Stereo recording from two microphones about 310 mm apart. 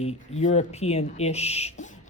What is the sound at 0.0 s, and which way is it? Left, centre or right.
Speech, left.